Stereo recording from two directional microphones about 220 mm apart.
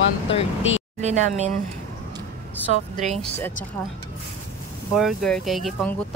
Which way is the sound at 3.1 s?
5° left (ahead or behind).